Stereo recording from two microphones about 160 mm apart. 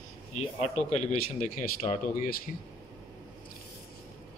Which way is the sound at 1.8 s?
30° left (ahead or behind).